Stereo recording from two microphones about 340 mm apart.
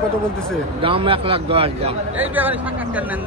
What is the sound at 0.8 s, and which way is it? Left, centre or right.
Speech, centre.